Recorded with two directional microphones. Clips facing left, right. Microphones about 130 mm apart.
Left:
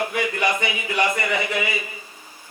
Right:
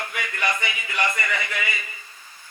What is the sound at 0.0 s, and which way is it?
A man's voice, 25° left (ahead or behind).